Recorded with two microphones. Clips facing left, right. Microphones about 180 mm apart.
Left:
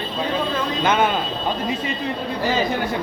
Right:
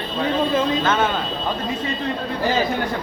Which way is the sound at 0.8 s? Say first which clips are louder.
Left 1 dB; 15° left (ahead or behind).